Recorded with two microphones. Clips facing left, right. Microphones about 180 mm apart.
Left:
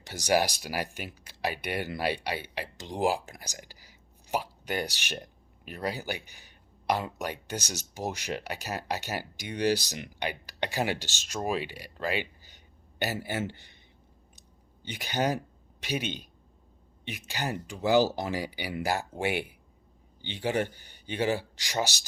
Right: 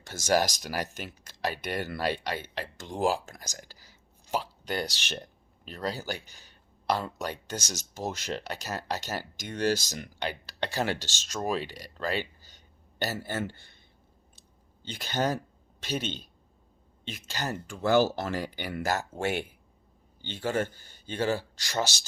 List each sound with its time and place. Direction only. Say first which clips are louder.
0.0 s speech: even; 15° left (ahead or behind)
14.8 s speech: even; 15° left (ahead or behind)